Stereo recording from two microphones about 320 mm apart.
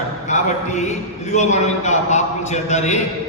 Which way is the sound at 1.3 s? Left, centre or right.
Left.